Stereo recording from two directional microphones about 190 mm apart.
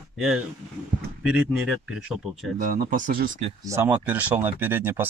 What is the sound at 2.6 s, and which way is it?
Speech, 45° right (ahead or behind).